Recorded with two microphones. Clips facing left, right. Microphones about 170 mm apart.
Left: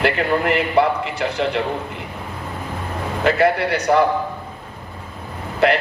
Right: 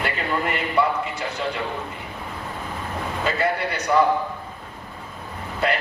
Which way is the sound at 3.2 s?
80° left.